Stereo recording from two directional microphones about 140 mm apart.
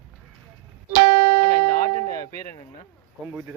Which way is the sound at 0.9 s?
90° right.